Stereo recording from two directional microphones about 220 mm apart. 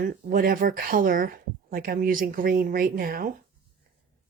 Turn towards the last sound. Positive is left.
turn(degrees=-40)  # may be behind; listen again after turning